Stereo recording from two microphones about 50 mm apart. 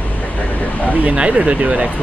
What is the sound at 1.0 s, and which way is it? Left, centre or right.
Speech, right.